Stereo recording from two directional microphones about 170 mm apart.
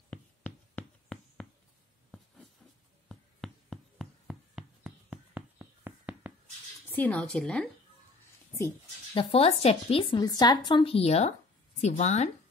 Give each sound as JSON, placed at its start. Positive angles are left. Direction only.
{"t": 0.1, "sound": "a sound", "side_deg": 10}
{"t": 3.1, "sound": "a sound", "side_deg": 0}
{"t": 6.9, "sound": "a woman's voice", "side_deg": 10}
{"t": 8.5, "sound": "speech", "side_deg": 20}
{"t": 9.2, "sound": "a woman's voice", "side_deg": 35}
{"t": 10.2, "sound": "a woman's voice", "side_deg": 25}